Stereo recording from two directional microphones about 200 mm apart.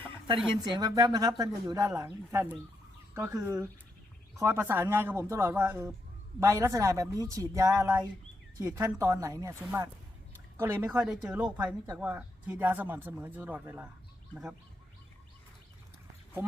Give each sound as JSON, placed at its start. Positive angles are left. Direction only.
{"t": 0.6, "sound": "speech", "side_deg": -20}